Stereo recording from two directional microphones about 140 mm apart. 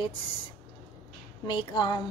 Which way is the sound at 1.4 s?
35° left (ahead or behind).